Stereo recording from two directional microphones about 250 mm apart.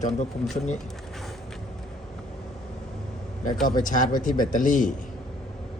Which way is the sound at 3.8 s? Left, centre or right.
Left.